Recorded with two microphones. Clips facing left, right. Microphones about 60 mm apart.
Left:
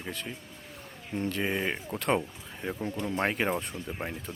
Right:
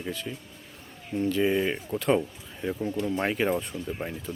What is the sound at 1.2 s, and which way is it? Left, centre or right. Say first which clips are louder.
Speech: right 6 dB; left.